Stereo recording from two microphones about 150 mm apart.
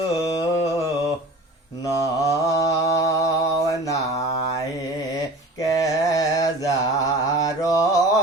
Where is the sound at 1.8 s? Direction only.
20° left (ahead or behind).